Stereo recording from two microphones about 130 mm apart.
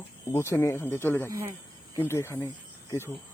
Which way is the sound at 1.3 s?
20° right (ahead or behind).